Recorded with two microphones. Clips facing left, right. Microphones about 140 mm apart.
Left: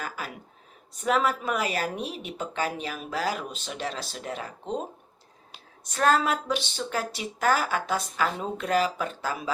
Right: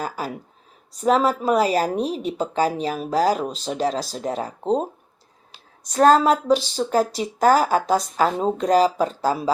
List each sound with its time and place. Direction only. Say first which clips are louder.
1.0 s speech: right 7 dB; 35° right (ahead or behind)